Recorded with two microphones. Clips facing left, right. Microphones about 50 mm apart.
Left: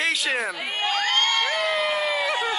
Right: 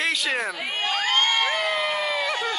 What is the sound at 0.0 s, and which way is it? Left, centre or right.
Crowd, centre.